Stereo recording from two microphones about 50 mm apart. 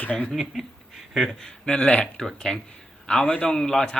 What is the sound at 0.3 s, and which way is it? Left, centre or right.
Speech, centre.